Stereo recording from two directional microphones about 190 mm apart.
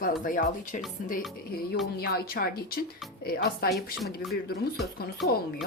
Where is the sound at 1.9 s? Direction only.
55° left (ahead or behind).